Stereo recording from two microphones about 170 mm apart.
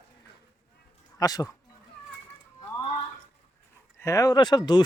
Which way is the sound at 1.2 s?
20° left (ahead or behind).